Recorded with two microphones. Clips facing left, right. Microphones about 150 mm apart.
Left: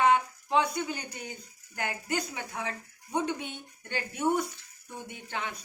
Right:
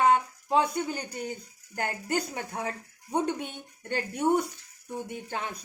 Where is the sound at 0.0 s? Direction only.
35° right (ahead or behind).